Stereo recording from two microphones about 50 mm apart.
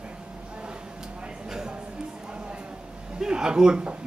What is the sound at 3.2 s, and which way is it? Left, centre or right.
Speech, centre.